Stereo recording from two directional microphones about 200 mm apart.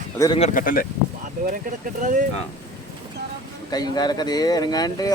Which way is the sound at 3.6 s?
20° left (ahead or behind).